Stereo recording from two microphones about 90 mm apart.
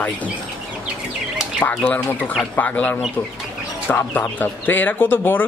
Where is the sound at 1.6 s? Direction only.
15° left (ahead or behind).